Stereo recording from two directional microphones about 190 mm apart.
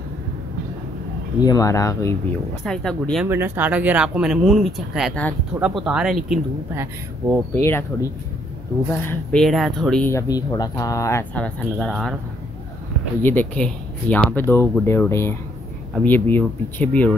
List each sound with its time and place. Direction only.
1.4 s speech: 20° left (ahead or behind)
2.6 s speech: 5° left (ahead or behind)
3.3 s speech: 10° right (ahead or behind)
6.7 s speech: 10° right (ahead or behind)
7.5 s speech: 15° left (ahead or behind)
13.2 s speech: 10° left (ahead or behind)